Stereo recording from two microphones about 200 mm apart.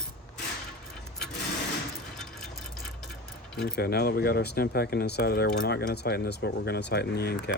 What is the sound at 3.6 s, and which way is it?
Speech, 50° left (ahead or behind).